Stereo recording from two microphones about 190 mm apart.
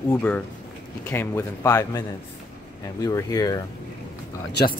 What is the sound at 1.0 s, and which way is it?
A man's voice, 10° left (ahead or behind).